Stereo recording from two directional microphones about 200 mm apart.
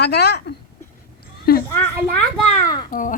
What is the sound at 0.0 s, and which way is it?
Speech, 55° left (ahead or behind).